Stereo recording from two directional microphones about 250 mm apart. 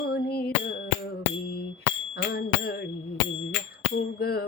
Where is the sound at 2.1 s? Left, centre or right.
Left.